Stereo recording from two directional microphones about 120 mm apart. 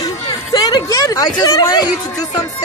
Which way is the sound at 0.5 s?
35° left (ahead or behind).